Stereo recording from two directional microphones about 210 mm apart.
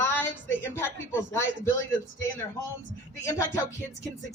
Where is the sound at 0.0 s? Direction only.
10° left (ahead or behind).